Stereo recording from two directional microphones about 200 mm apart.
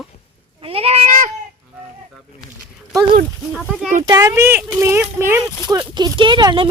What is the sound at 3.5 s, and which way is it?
Speech, 5° right (ahead or behind).